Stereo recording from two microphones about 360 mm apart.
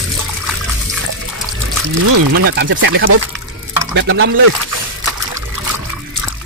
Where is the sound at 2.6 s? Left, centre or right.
Right.